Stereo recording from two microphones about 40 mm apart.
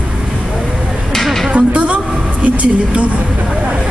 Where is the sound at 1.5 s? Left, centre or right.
Right.